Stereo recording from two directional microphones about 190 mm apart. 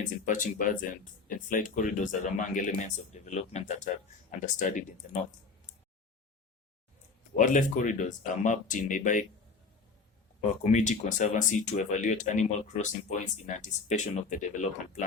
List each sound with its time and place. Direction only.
0.0 s speech: 40° left (ahead or behind)
7.3 s speech: 40° left (ahead or behind)
10.4 s speech: 40° left (ahead or behind)